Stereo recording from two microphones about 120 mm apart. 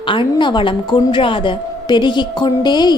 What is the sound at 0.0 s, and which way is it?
A woman's voice, 45° left (ahead or behind).